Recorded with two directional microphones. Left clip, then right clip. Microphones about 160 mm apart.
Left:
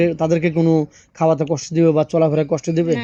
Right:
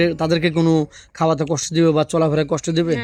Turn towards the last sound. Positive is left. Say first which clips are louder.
# left 1 dB
turn(degrees=-20)  # may be behind; listen again after turning